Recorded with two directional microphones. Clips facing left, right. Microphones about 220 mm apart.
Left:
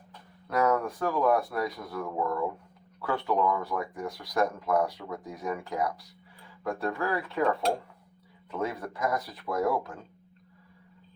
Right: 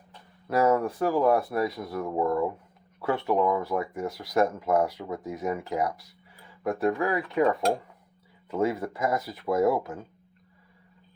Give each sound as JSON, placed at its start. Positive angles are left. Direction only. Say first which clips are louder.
{"t": 0.4, "sound": "speech", "louder": "right 3 dB", "side_deg": -25}
{"t": 8.4, "sound": "speech", "louder": "right 6 dB", "side_deg": -25}